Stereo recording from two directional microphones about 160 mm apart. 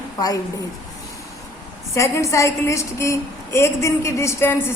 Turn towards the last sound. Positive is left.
turn(degrees=15)  # may be behind; listen again after turning